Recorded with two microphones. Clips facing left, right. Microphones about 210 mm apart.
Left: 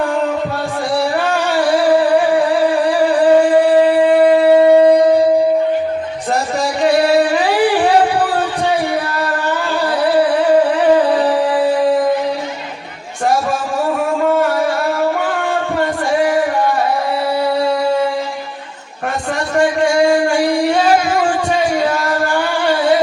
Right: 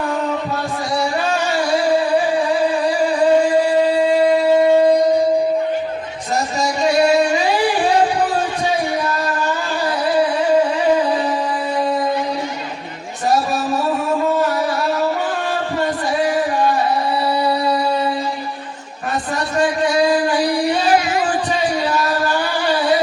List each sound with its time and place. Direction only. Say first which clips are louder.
1.3 s music: left 3 dB; 55° left (ahead or behind)
3.6 s shofar: left 4 dB; 55° left (ahead or behind)
6.6 s music: left 2 dB; 55° left (ahead or behind)
17.5 s music: left 3 dB; 50° left (ahead or behind)
20.0 s singing: left 3 dB; 25° left (ahead or behind)
20.3 s music: left 3 dB; 25° left (ahead or behind)
21.2 s music: left 3 dB; 50° left (ahead or behind)